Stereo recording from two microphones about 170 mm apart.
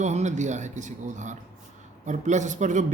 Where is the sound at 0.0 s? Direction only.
45° right (ahead or behind).